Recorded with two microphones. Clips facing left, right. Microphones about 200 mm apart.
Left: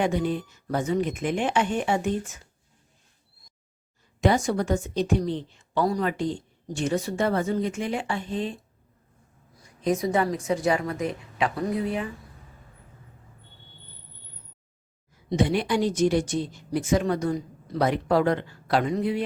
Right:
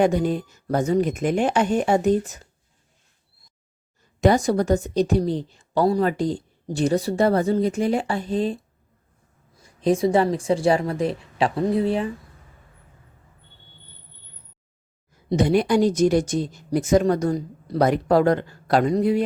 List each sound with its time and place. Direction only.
0.0 s a woman's voice: 40° right (ahead or behind)
4.2 s a woman's voice: 40° right (ahead or behind)
9.6 s a woman's voice: 30° right (ahead or behind)
15.3 s a woman's voice: 40° right (ahead or behind)